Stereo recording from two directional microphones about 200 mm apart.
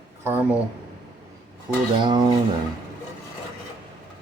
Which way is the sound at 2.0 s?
20° right (ahead or behind).